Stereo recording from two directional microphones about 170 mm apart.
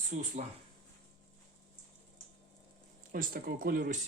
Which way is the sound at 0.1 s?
45° right (ahead or behind).